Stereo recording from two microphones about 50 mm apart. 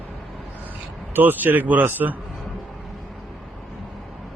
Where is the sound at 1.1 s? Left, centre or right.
Right.